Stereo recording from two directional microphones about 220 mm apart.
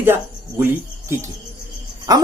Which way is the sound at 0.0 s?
10° right (ahead or behind).